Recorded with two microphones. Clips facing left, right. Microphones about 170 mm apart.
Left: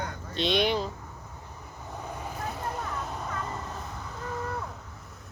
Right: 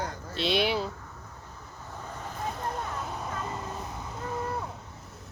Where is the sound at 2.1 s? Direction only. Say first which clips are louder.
Left 2 dB; 10° left (ahead or behind).